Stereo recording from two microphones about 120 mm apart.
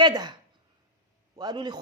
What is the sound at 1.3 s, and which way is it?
Speech, 35° right (ahead or behind).